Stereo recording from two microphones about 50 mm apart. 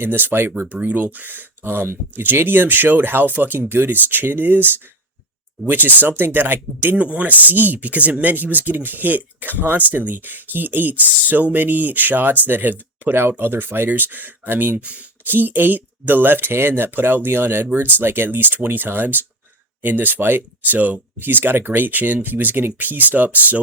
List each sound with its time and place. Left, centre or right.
0.0 s speech: right
0.7 s speech: right
1.6 s speech: right
6.9 s speech: right
14.8 s speech: right
15.4 s speech: right